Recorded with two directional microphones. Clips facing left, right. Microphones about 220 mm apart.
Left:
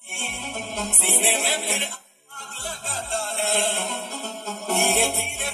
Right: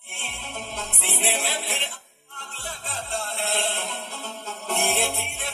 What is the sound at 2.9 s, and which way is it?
Music, 45° left (ahead or behind).